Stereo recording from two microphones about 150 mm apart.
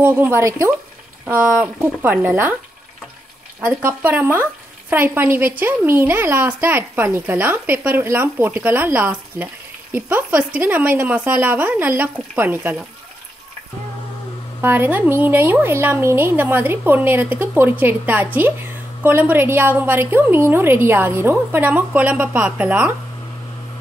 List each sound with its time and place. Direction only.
0.0 s speech: 15° right (ahead or behind)
3.6 s speech: 15° right (ahead or behind)
14.6 s speech: 15° right (ahead or behind)